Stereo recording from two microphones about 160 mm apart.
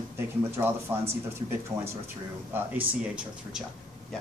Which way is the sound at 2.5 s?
10° right (ahead or behind).